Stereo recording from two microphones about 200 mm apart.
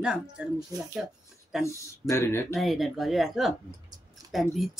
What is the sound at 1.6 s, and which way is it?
Speech, 15° left (ahead or behind).